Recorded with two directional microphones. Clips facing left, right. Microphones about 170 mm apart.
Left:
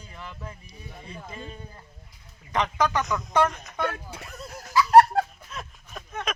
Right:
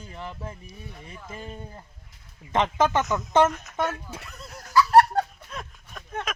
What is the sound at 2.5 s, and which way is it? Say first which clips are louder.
Speech: right 2 dB; 25° right (ahead or behind).